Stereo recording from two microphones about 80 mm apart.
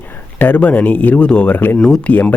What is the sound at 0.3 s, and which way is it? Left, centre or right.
Speech, centre.